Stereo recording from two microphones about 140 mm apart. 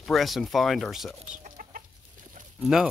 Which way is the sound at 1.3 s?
70° right (ahead or behind).